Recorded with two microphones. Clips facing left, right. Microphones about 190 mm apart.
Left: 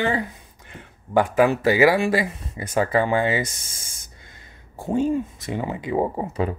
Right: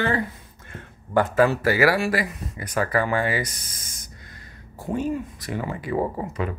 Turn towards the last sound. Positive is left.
turn(degrees=25)  # may be behind; listen again after turning